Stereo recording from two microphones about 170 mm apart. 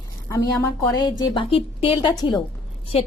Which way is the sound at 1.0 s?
25° left (ahead or behind).